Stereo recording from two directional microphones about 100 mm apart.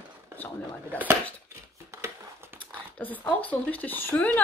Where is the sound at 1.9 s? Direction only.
30° right (ahead or behind).